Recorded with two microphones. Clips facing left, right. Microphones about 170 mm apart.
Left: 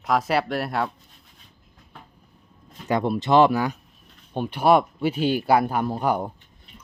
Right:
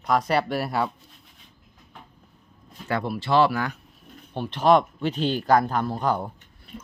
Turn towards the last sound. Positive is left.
turn(degrees=15)  # may be behind; listen again after turning